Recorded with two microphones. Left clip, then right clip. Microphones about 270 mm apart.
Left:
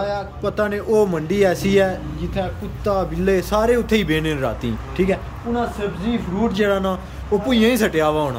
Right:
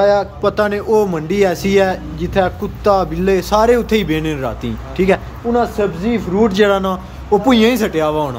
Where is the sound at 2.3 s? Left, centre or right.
Centre.